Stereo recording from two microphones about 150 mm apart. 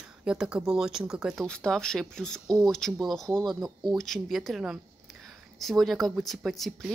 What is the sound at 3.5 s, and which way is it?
Speech, 25° right (ahead or behind).